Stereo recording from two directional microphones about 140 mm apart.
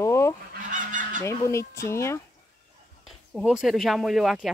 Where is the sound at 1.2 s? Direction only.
20° left (ahead or behind).